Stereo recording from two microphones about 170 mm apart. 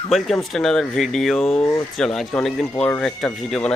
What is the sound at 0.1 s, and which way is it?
Speech, centre (ahead or behind).